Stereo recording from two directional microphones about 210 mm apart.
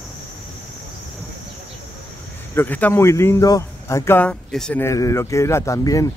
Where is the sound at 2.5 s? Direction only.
10° left (ahead or behind).